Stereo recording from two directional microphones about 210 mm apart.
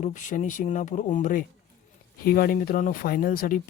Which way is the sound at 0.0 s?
35° left (ahead or behind).